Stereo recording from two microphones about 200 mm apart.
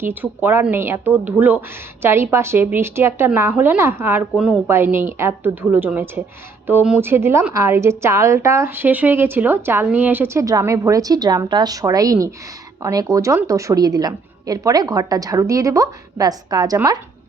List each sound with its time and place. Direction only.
0.0 s speech: 10° right (ahead or behind)